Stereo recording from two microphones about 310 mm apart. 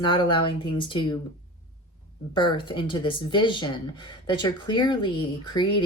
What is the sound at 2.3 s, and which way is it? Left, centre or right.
Speech, centre.